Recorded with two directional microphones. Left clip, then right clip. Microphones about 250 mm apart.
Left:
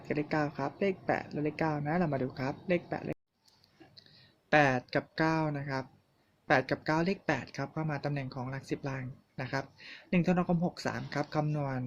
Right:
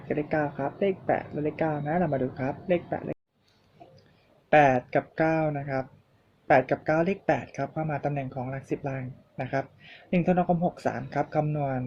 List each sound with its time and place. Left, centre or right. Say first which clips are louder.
0.1 s speech: right 5 dB; left
4.5 s speech: right 6 dB; left